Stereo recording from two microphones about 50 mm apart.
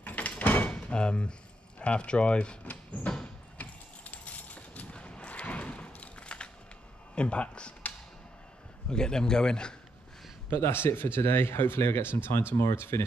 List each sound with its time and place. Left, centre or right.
0.0 s door: left
0.7 s door: centre
1.8 s speech: left
2.7 s a sound: left
7.2 s speech: left
8.8 s a man's voice: centre
10.5 s speech: left